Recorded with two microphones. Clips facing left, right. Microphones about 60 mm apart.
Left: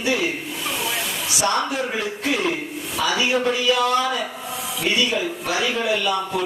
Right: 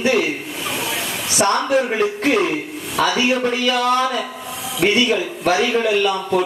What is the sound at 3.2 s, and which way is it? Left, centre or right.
A man's voice, right.